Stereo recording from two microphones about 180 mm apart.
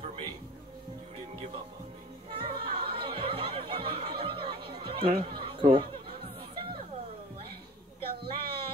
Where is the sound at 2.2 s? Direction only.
25° right (ahead or behind).